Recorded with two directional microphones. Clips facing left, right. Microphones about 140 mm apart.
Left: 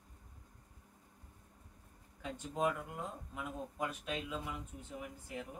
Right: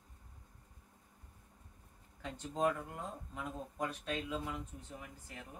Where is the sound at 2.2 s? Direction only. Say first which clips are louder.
Right 1 dB; 10° left (ahead or behind).